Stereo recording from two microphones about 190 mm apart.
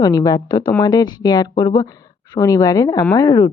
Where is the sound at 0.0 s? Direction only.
20° left (ahead or behind).